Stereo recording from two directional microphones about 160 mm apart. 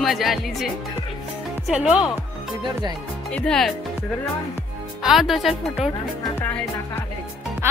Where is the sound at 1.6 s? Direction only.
5° right (ahead or behind).